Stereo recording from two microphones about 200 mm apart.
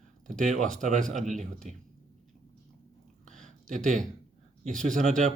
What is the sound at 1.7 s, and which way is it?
Speech, 35° right (ahead or behind).